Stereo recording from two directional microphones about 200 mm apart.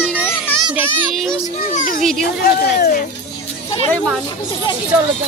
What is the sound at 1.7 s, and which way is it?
Speech, 45° left (ahead or behind).